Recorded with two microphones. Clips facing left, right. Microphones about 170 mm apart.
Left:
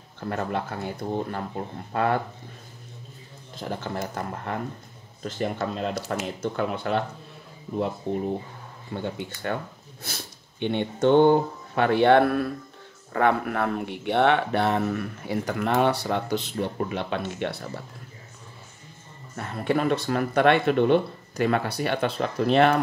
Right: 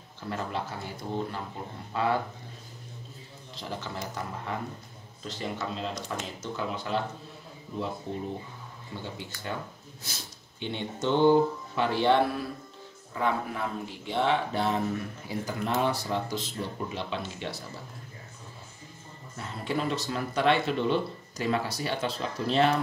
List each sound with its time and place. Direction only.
0.2 s speech: 55° left (ahead or behind)
3.5 s speech: 50° left (ahead or behind)
8.1 s speech: 55° left (ahead or behind)
19.3 s speech: 60° left (ahead or behind)